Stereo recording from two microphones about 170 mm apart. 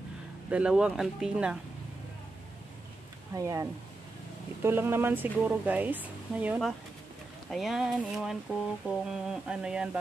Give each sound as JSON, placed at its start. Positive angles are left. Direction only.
{"t": 0.5, "sound": "speech", "side_deg": -5}
{"t": 3.3, "sound": "speech", "side_deg": -20}
{"t": 4.6, "sound": "speech", "side_deg": -15}